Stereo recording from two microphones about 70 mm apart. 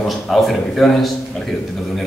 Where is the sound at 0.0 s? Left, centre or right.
Centre.